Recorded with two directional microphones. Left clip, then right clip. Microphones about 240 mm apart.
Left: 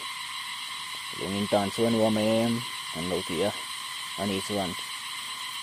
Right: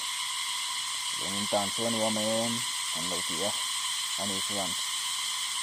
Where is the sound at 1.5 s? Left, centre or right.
Left.